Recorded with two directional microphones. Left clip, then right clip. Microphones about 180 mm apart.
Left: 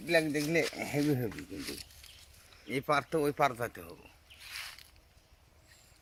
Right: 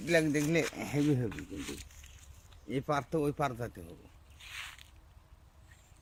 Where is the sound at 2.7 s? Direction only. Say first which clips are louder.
Left 3 dB; 45° left (ahead or behind); by 3.9 s 25° left (ahead or behind).